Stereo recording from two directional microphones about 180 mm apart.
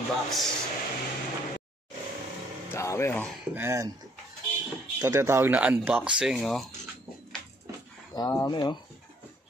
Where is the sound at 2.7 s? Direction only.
15° left (ahead or behind).